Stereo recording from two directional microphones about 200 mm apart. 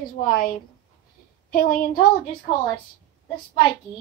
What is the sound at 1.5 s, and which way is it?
Speech, 45° left (ahead or behind).